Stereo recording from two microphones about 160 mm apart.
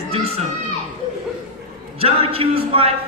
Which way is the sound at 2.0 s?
35° right (ahead or behind).